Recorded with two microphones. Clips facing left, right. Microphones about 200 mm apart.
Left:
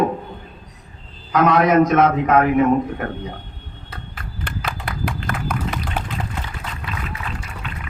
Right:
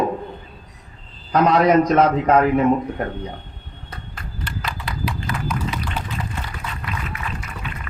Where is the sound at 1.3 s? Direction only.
35° right (ahead or behind).